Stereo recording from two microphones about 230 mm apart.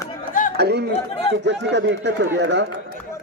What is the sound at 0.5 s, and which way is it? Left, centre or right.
A man's voice, right.